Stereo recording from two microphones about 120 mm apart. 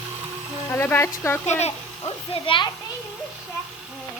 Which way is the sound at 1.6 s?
55° left (ahead or behind).